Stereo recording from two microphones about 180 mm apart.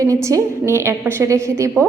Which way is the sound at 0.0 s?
15° right (ahead or behind).